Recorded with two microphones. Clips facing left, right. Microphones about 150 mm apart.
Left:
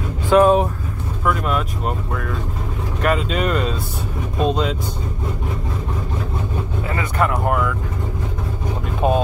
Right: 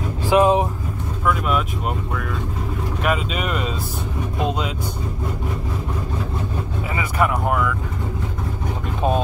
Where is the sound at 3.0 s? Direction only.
5° right (ahead or behind).